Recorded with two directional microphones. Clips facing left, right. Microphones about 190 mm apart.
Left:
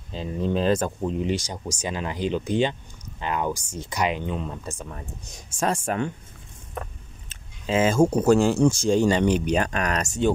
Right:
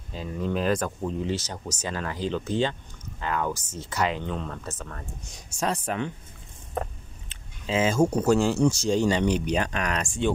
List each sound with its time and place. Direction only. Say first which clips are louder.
0.1 s speech: left 3 dB; 25° left (ahead or behind)
5.5 s speech: left 3 dB; 50° left (ahead or behind)
7.2 s speech: left 3 dB; 55° left (ahead or behind)